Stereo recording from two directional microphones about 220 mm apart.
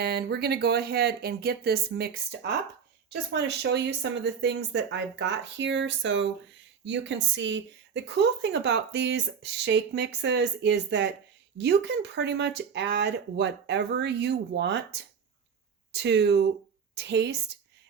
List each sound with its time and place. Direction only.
0.0 s a woman's voice: 45° right (ahead or behind)